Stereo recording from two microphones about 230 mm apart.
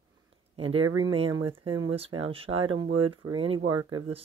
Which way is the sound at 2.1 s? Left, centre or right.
Right.